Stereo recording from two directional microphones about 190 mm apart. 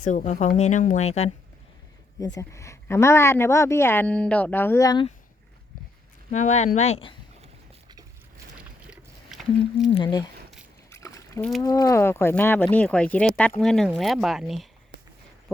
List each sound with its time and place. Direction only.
0.0 s speech: 40° left (ahead or behind)
2.2 s speech: 15° left (ahead or behind)
6.3 s speech: 40° left (ahead or behind)
8.5 s a sound: 5° right (ahead or behind)
9.9 s speech: 25° left (ahead or behind)
10.9 s a sound: 15° left (ahead or behind)
11.6 s speech: 20° left (ahead or behind); by 14.7 s centre (ahead or behind)